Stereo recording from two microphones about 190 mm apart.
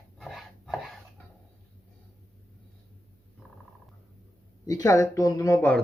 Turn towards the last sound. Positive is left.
turn(degrees=15)  # may be behind; listen again after turning